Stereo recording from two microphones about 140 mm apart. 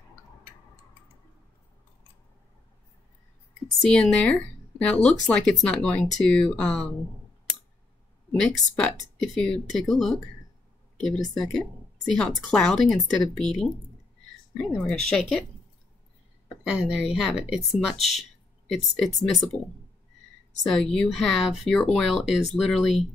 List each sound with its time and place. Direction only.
3.8 s speech: 5° left (ahead or behind)
8.5 s speech: 5° left (ahead or behind)
16.7 s speech: 5° right (ahead or behind)
17.9 s speech: 50° left (ahead or behind)
18.7 s speech: centre (ahead or behind)
20.6 s speech: 5° left (ahead or behind)